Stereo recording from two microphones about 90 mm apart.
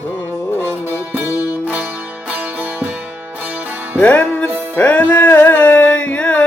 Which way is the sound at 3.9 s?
15° left (ahead or behind).